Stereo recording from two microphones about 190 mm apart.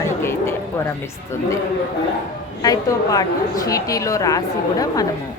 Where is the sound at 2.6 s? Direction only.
20° left (ahead or behind).